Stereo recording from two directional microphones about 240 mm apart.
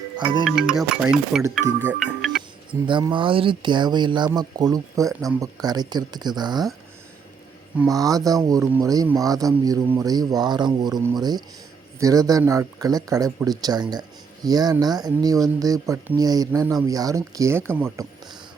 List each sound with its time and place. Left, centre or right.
0.2 s speech: centre
0.4 s speech: centre
1.9 s music: centre
2.8 s speech: centre
7.8 s speech: centre